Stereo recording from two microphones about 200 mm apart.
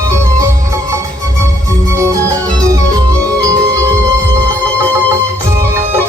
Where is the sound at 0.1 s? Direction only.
15° right (ahead or behind).